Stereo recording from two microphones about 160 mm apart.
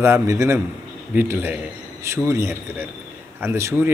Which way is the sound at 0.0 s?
15° right (ahead or behind).